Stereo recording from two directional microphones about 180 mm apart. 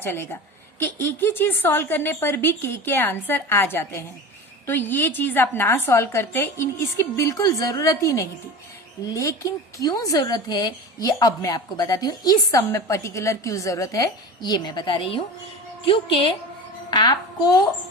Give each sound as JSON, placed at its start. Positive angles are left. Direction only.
{"t": 0.0, "sound": "a woman's voice", "side_deg": 10}